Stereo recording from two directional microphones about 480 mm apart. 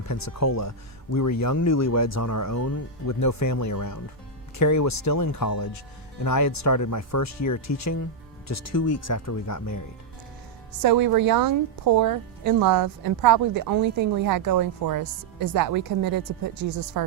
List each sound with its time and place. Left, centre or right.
0.1 s speech: left
10.8 s speech: right